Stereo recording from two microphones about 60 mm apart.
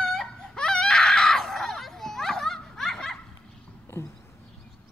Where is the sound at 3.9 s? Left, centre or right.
Left.